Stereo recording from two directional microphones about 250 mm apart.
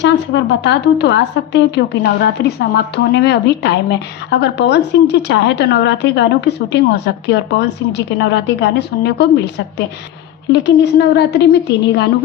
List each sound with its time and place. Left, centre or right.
0.0 s a woman's voice: left